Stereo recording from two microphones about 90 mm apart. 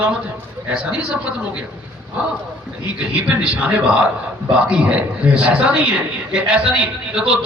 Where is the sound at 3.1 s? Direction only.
15° right (ahead or behind).